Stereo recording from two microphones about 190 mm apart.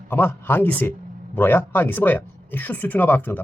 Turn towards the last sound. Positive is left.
turn(degrees=10)  # may be behind; listen again after turning